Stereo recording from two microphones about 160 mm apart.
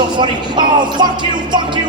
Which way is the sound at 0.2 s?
30° right (ahead or behind).